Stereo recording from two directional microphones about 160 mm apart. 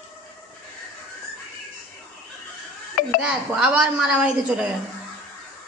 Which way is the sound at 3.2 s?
5° right (ahead or behind).